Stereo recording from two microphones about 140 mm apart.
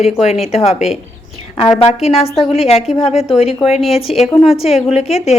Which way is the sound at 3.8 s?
Centre (ahead or behind).